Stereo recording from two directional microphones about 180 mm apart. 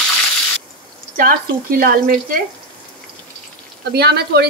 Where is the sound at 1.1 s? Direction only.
55° right (ahead or behind).